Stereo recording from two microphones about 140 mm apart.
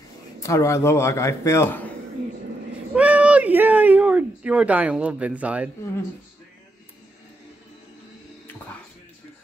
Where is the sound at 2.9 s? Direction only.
10° right (ahead or behind).